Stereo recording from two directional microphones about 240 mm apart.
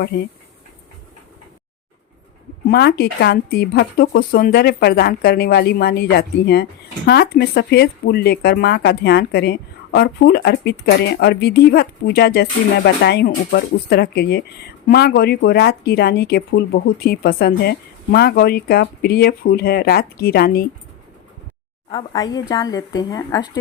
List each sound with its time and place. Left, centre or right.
2.6 s speech: left
21.8 s a woman's voice: centre